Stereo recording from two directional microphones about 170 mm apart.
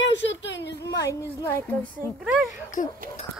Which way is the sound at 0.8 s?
15° left (ahead or behind).